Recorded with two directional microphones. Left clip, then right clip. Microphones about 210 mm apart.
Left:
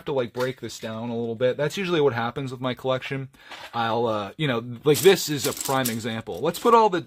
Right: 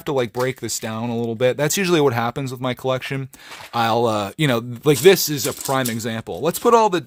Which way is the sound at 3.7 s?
40° right (ahead or behind).